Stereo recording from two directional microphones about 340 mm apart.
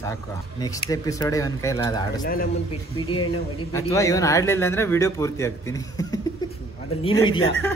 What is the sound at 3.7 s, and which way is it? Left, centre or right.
Speech, centre.